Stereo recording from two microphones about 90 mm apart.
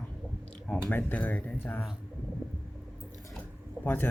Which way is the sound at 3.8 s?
20° left (ahead or behind).